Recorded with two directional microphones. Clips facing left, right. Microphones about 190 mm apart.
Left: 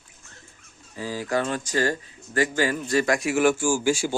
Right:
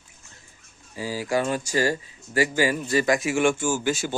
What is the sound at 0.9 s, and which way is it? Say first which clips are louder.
Speech: right 1 dB; 10° right (ahead or behind).